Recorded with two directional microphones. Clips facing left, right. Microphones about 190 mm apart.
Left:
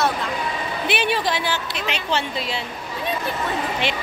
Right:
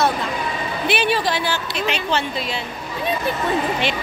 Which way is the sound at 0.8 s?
20° left (ahead or behind).